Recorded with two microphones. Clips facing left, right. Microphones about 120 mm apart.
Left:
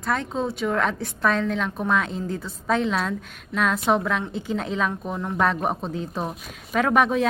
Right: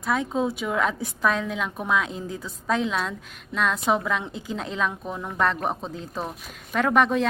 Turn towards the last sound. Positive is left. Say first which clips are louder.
# left 1 dB
turn(degrees=0)  # may be behind; listen again after turning